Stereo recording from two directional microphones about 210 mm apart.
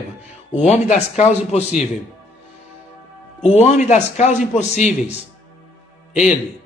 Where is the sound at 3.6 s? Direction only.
35° left (ahead or behind).